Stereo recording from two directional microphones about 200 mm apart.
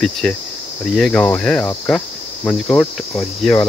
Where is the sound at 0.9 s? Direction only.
5° left (ahead or behind).